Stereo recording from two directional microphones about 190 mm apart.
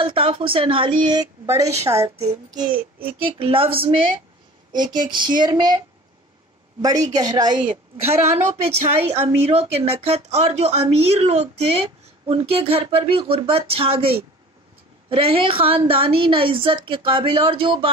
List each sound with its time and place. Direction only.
0.0 s a woman's voice: 30° right (ahead or behind)
6.8 s a woman's voice: 20° right (ahead or behind)
7.6 s a woman's voice: 35° right (ahead or behind)